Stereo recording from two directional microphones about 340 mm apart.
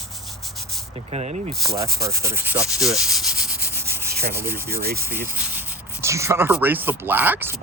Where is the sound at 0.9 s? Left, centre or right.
Centre.